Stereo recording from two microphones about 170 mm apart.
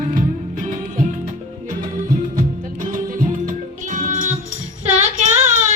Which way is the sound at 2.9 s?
50° right (ahead or behind).